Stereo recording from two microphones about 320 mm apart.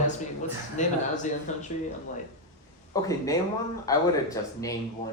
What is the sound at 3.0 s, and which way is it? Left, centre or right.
Speech, centre.